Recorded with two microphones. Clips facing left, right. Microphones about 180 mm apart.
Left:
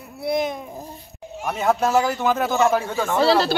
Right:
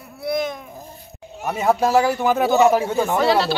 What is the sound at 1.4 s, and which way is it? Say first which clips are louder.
Speech: right 2 dB; 5° right (ahead or behind).